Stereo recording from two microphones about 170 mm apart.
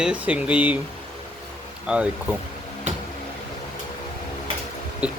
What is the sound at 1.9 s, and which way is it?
Speech, 10° right (ahead or behind).